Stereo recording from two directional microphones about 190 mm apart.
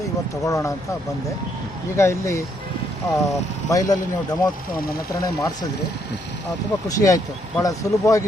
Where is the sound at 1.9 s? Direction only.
15° left (ahead or behind).